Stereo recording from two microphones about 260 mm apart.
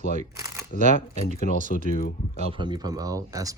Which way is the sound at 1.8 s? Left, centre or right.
Left.